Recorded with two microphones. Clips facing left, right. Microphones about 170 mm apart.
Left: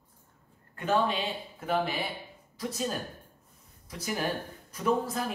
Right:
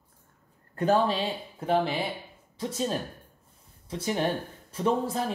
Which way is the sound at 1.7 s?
25° right (ahead or behind).